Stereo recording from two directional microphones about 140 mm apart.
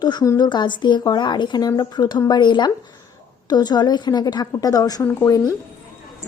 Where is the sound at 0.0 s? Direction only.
30° left (ahead or behind).